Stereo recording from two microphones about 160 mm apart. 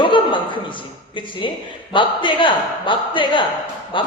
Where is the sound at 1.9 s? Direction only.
30° left (ahead or behind).